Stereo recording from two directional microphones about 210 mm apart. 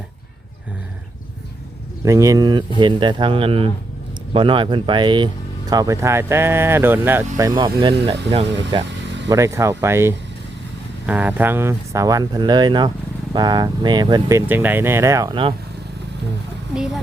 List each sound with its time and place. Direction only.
2.0 s speech: 15° right (ahead or behind)